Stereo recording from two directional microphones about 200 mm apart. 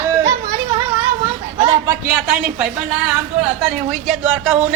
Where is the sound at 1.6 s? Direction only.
25° right (ahead or behind).